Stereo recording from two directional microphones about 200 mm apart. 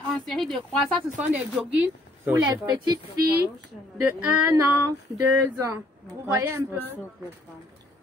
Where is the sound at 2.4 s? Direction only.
20° right (ahead or behind).